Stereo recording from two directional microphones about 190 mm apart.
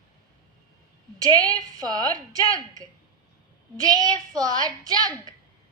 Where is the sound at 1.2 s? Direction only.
20° right (ahead or behind).